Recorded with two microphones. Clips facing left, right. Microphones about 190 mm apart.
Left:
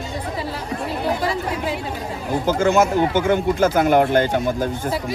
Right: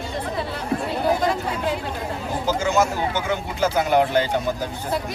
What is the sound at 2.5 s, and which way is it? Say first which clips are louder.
Speech: left 4 dB; 55° left (ahead or behind).